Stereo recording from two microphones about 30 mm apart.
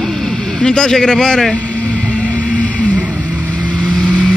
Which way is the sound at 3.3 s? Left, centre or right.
Right.